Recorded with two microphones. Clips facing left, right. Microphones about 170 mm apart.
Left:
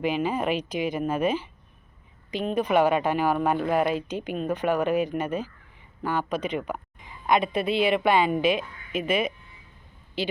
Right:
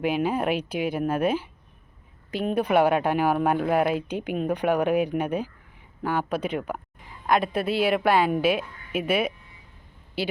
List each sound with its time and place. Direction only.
0.0 s a woman's voice: 10° right (ahead or behind)